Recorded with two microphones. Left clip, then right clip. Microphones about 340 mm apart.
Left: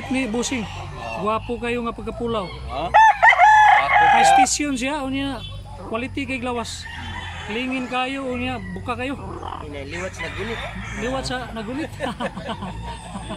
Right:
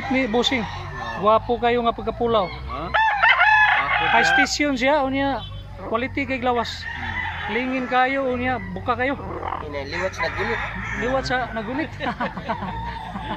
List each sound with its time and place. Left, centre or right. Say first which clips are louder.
0.1 s speech: right 4 dB; centre
2.8 s chicken: left 6 dB; centre
4.2 s speech: left 3 dB; centre
11.0 s speech: right 4 dB; centre